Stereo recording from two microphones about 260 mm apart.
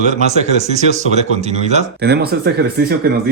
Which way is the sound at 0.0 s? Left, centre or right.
Right.